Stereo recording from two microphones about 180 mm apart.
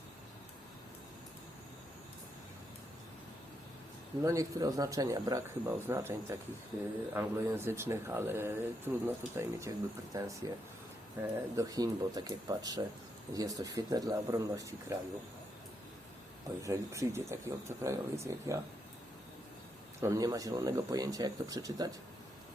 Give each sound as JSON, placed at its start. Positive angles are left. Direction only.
{"t": 4.2, "sound": "speech", "side_deg": -20}
{"t": 16.6, "sound": "speech", "side_deg": -15}
{"t": 20.0, "sound": "speech", "side_deg": -20}